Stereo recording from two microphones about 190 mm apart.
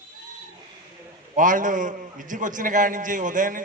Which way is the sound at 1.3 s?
45° right (ahead or behind).